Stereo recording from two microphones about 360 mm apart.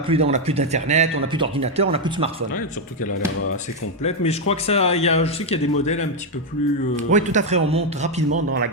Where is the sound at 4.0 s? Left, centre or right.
Centre.